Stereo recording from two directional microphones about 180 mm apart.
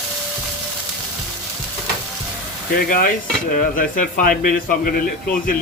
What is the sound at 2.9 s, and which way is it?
Speech, 50° left (ahead or behind).